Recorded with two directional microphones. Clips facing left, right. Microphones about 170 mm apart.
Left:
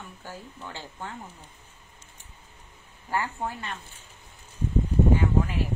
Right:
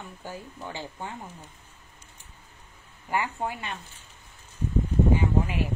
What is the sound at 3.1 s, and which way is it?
Speech, 15° right (ahead or behind).